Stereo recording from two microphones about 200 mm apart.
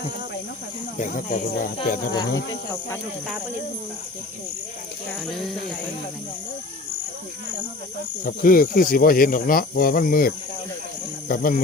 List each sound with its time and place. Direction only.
0.9 s speech: 40° left (ahead or behind)
2.1 s speech: 20° left (ahead or behind)
5.2 s speech: centre (ahead or behind)
8.2 s speech: 45° left (ahead or behind)